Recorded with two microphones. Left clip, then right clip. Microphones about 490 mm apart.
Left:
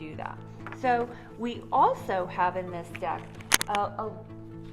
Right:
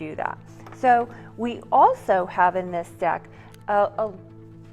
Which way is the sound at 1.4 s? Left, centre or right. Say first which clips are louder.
Right 6 dB; right.